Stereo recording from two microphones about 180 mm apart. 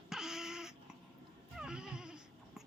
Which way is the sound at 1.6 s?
5° right (ahead or behind).